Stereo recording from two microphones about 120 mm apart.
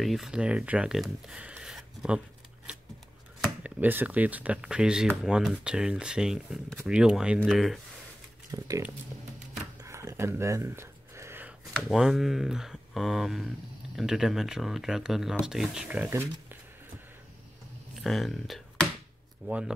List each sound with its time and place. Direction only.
0.0 s speech: centre (ahead or behind)
8.5 s speech: 30° right (ahead or behind)
9.8 s a sound: 25° right (ahead or behind)
11.9 s speech: 5° right (ahead or behind)
18.0 s speech: centre (ahead or behind)
19.4 s speech: 10° right (ahead or behind)